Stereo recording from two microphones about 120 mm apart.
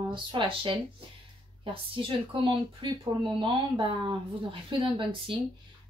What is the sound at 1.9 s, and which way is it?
Speech, 45° right (ahead or behind).